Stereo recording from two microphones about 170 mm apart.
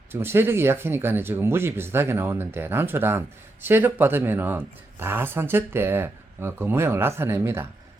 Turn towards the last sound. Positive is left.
turn(degrees=-15)  # may be behind; listen again after turning